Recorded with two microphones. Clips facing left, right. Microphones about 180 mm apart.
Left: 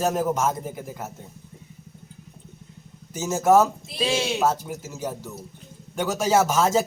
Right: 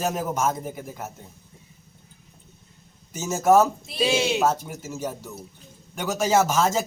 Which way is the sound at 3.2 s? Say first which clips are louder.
Even; 5° left (ahead or behind).